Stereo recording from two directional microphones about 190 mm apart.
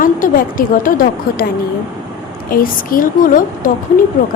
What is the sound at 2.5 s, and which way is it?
A woman's voice, 50° left (ahead or behind).